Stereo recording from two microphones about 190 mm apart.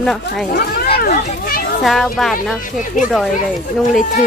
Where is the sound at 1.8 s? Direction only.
Centre (ahead or behind).